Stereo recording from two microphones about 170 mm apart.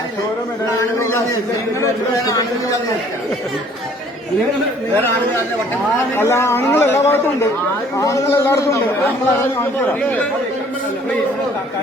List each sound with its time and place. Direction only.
0.6 s a sound: 20° left (ahead or behind)
2.1 s a man's voice: 20° left (ahead or behind)
6.1 s speech: 15° left (ahead or behind)